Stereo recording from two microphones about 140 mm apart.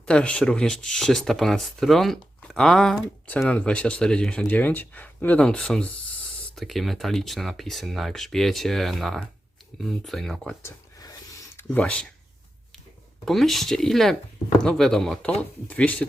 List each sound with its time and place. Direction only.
0.0 s speech: 5° left (ahead or behind)
10.6 s a sound: 25° left (ahead or behind)
11.7 s speech: 10° left (ahead or behind)
13.2 s speech: centre (ahead or behind)